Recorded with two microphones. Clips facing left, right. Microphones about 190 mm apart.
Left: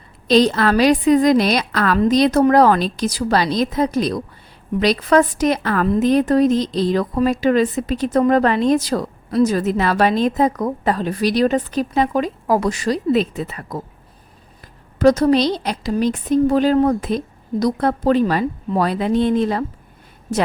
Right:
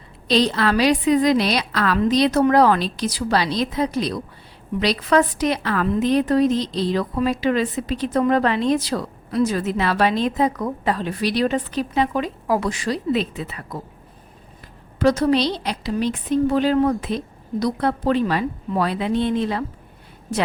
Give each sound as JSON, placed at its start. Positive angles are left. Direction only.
{"t": 0.3, "sound": "a woman's voice", "side_deg": 45}
{"t": 14.9, "sound": "a woman's voice", "side_deg": 40}